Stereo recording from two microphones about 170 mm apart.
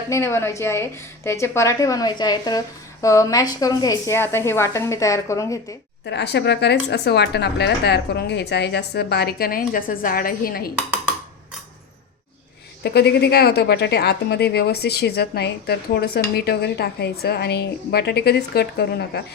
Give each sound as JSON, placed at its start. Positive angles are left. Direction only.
{"t": 0.1, "sound": "a woman's voice", "side_deg": 15}
{"t": 6.1, "sound": "speech", "side_deg": 90}
{"t": 12.8, "sound": "speech", "side_deg": 75}